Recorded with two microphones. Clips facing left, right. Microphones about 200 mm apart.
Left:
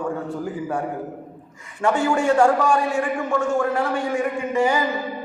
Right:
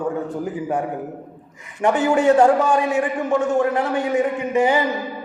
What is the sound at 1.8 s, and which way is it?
A man's voice, 20° right (ahead or behind).